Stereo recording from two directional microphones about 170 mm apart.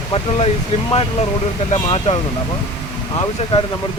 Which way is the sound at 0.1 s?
35° left (ahead or behind).